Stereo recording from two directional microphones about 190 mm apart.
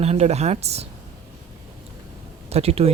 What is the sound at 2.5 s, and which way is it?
Speech, 35° right (ahead or behind).